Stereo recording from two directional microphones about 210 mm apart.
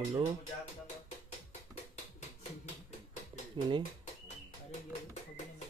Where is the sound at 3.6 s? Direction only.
20° right (ahead or behind).